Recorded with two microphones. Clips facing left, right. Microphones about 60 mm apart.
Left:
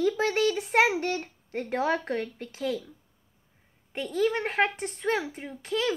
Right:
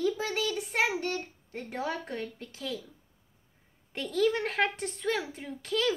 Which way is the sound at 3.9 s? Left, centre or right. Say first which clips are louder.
Left 1 dB; centre.